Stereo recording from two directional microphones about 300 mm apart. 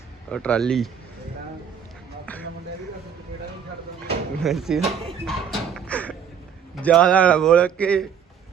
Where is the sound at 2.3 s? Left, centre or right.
Centre.